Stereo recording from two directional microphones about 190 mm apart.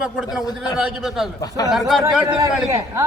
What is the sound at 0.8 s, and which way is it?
A man's voice, centre (ahead or behind).